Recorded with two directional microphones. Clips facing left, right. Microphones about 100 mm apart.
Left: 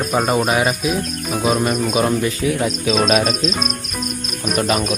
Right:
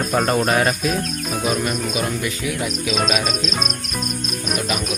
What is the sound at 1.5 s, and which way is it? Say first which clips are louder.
Cricket: left 5 dB; 25° left (ahead or behind).